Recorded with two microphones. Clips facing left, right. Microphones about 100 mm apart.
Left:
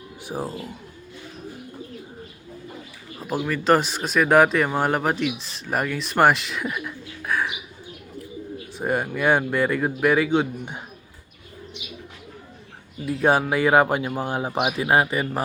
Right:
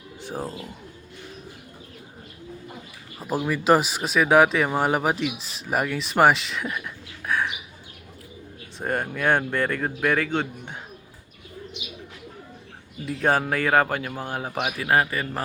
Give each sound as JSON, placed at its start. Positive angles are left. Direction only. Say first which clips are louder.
{"t": 0.2, "sound": "speech", "louder": "left 2 dB", "side_deg": 10}
{"t": 3.2, "sound": "speech", "louder": "even", "side_deg": -5}
{"t": 8.8, "sound": "a man's voice", "louder": "left 2 dB", "side_deg": 5}
{"t": 13.1, "sound": "speech", "louder": "left 3 dB", "side_deg": 10}